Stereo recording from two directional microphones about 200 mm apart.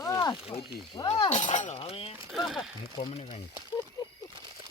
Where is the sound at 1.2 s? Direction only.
35° left (ahead or behind).